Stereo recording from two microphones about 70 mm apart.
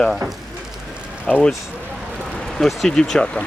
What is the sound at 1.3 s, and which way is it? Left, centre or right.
Speech, centre.